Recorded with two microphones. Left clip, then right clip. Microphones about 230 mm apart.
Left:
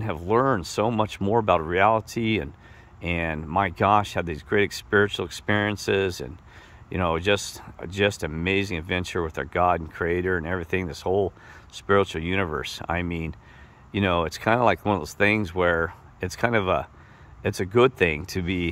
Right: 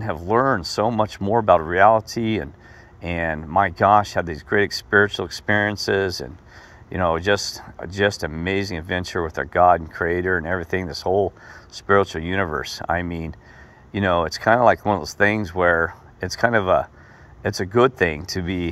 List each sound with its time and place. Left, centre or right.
0.0 s speech: centre